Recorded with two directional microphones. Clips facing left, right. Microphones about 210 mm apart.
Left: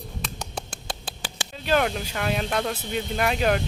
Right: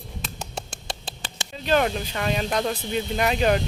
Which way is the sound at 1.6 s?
5° left (ahead or behind).